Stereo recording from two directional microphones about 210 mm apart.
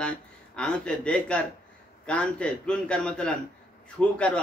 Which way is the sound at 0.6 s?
5° left (ahead or behind).